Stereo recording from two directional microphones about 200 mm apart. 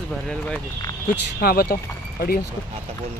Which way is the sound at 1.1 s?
50° left (ahead or behind).